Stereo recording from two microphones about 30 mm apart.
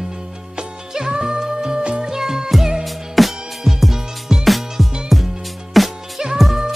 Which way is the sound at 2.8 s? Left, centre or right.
Centre.